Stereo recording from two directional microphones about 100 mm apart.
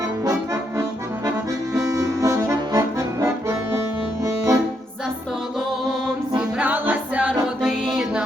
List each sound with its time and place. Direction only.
0.0 s accordion: 30° right (ahead or behind)
1.7 s accordion: 30° right (ahead or behind)
6.6 s music: 15° right (ahead or behind)